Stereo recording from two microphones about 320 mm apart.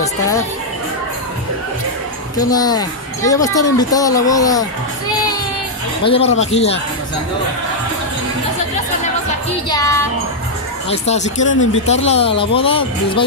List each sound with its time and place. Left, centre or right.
2.3 s speech: centre
6.0 s speech: centre
9.7 s music: centre
10.9 s speech: left